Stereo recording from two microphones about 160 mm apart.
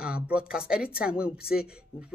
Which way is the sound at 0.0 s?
5° right (ahead or behind).